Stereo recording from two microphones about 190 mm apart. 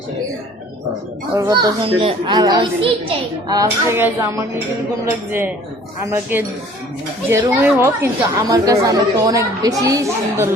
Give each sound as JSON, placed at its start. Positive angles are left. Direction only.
{"t": 1.3, "sound": "a child's voice", "side_deg": -20}
{"t": 7.3, "sound": "speech", "side_deg": -15}